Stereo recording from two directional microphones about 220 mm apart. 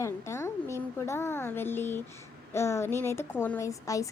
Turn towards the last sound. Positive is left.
turn(degrees=15)  # may be behind; listen again after turning